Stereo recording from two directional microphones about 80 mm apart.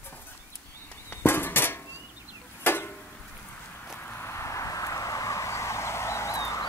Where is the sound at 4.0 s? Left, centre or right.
Left.